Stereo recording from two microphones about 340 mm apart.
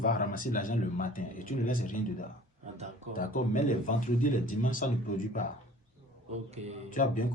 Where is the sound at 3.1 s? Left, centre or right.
Left.